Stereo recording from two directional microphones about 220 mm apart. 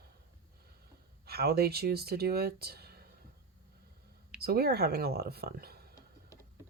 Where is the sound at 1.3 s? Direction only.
45° right (ahead or behind).